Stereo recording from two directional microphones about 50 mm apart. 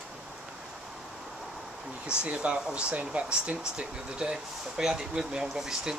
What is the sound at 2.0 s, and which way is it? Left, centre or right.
Speech, right.